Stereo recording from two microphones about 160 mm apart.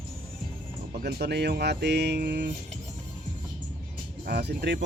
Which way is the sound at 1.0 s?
85° right.